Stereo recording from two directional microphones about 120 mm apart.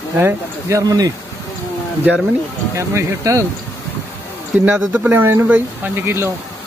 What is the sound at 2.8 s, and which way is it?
Speech, 25° right (ahead or behind).